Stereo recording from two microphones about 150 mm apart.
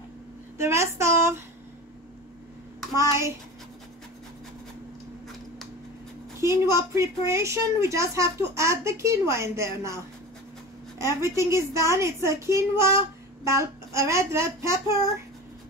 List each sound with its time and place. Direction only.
0.6 s speech: 15° right (ahead or behind)
3.0 s a woman's voice: 20° right (ahead or behind)
6.4 s a woman's voice: 20° right (ahead or behind)